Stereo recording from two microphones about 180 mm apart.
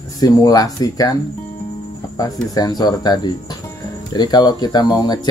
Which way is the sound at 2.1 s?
20° left (ahead or behind).